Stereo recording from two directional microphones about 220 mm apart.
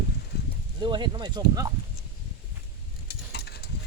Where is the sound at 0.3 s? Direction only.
45° left (ahead or behind).